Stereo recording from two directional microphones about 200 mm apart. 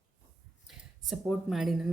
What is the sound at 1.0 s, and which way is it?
Speech, centre (ahead or behind).